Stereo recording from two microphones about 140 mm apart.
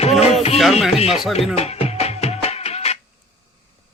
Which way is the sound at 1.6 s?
50° left (ahead or behind).